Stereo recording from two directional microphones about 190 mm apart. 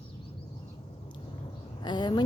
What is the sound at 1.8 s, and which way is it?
Speech, 25° left (ahead or behind).